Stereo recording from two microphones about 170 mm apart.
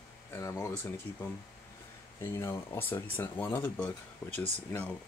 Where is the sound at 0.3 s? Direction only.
15° left (ahead or behind).